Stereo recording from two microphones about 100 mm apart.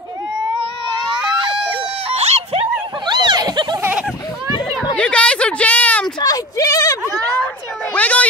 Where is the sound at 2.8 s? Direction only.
50° right (ahead or behind).